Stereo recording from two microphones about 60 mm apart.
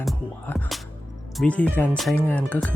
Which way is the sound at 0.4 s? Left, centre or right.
Left.